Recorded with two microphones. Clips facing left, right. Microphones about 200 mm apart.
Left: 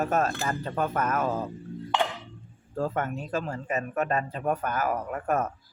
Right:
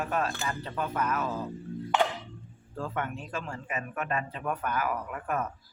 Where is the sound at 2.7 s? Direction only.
40° left (ahead or behind).